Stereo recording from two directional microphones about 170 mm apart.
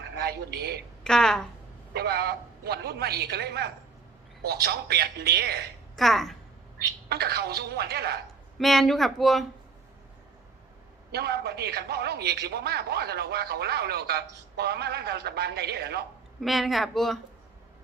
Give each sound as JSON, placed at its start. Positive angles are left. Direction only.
{"t": 0.2, "sound": "speech", "side_deg": -70}
{"t": 1.0, "sound": "speech", "side_deg": 5}
{"t": 1.9, "sound": "a man's voice", "side_deg": -70}
{"t": 6.0, "sound": "speech", "side_deg": 0}
{"t": 7.1, "sound": "a man's voice", "side_deg": -70}
{"t": 8.5, "sound": "speech", "side_deg": 0}
{"t": 11.1, "sound": "a man's voice", "side_deg": -70}
{"t": 16.4, "sound": "speech", "side_deg": 0}